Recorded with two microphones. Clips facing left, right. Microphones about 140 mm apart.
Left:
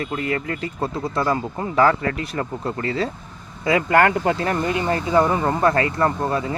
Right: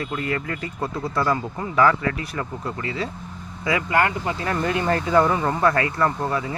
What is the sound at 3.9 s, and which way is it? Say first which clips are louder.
Speech: left 6 dB; 55° left (ahead or behind).